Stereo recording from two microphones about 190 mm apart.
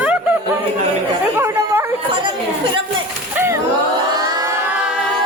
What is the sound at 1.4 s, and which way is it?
Chatter, 15° right (ahead or behind).